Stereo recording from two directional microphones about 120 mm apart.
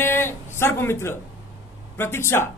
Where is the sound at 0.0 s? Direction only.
20° left (ahead or behind).